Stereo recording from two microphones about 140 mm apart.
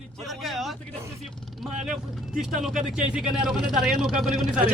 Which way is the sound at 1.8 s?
5° right (ahead or behind).